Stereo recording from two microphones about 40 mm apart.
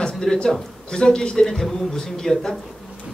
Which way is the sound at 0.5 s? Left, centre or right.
Centre.